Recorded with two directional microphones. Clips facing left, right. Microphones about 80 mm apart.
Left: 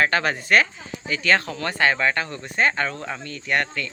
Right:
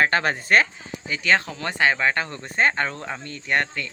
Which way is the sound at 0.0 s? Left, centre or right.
Right.